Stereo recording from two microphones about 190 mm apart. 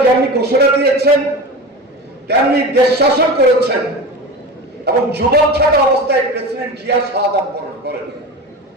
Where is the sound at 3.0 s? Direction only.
60° right (ahead or behind).